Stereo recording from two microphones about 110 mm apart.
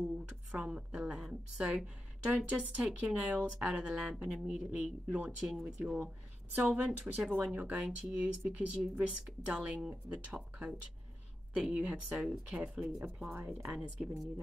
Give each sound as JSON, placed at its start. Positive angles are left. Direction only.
{"t": 0.5, "sound": "a woman's voice", "side_deg": -10}
{"t": 13.7, "sound": "speech", "side_deg": -5}